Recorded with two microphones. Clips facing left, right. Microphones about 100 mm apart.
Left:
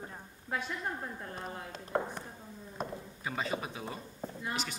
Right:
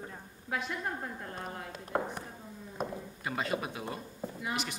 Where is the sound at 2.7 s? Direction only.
Centre (ahead or behind).